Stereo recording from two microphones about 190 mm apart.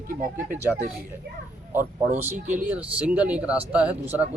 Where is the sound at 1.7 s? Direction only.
10° right (ahead or behind).